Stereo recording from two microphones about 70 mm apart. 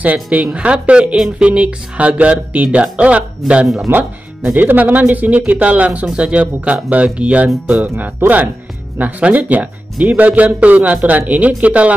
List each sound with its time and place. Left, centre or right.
0.0 s speech: right
3.6 s speech: centre
4.6 s speech: right
8.2 s speech: right